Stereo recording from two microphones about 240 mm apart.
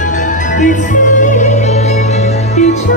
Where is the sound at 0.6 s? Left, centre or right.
Left.